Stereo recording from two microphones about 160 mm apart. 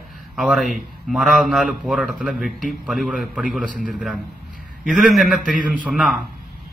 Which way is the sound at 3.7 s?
55° right (ahead or behind).